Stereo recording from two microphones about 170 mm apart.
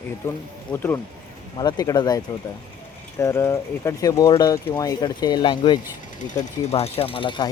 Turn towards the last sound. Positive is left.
turn(degrees=30)  # may be behind; listen again after turning